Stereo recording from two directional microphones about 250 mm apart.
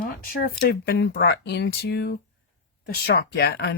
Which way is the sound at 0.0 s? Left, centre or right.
Left.